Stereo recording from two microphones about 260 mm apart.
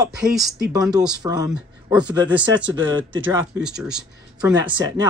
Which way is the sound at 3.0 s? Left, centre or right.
Right.